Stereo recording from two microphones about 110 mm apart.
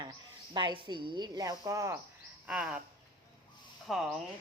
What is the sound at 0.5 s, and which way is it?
Speech, 45° right (ahead or behind).